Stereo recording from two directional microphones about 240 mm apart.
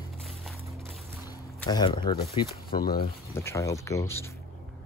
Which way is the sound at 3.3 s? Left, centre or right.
Centre.